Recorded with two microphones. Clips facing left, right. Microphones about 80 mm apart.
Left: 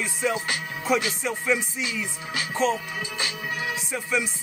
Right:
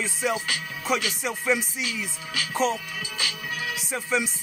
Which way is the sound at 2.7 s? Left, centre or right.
Left.